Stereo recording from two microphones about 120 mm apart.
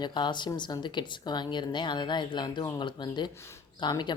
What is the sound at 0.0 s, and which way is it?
Speech, 40° left (ahead or behind).